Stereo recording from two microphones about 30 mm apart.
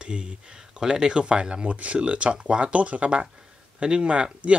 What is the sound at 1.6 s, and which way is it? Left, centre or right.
Speech, right.